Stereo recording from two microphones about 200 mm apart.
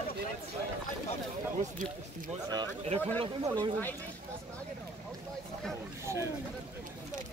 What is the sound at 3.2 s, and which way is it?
Speech, 20° right (ahead or behind).